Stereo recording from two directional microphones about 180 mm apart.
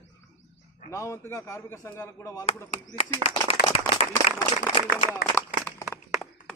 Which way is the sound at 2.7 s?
35° left (ahead or behind).